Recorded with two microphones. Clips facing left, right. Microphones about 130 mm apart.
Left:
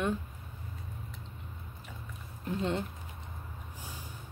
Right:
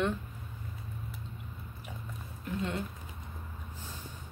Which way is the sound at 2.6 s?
30° left (ahead or behind).